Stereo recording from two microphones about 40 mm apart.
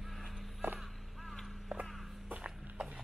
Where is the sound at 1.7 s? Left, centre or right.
Right.